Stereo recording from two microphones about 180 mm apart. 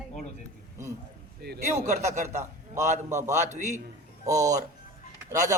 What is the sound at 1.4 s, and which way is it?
Speech, 65° right (ahead or behind).